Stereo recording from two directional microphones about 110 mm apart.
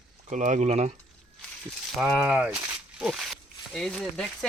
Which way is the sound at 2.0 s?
10° right (ahead or behind).